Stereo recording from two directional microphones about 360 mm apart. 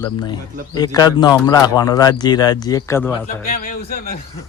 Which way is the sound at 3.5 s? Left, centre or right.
Left.